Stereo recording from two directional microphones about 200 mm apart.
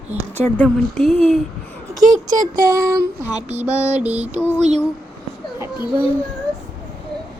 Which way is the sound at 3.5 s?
35° right (ahead or behind).